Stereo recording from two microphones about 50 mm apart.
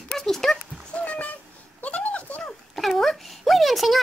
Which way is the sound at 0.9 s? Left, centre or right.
Left.